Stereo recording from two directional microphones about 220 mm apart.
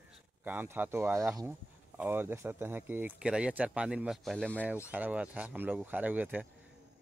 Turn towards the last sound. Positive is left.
turn(degrees=-5)  # may be behind; listen again after turning